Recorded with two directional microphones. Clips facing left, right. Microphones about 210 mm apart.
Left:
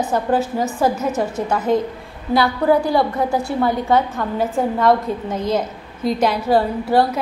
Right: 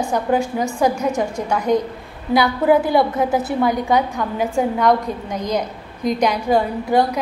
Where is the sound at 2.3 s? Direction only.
20° right (ahead or behind).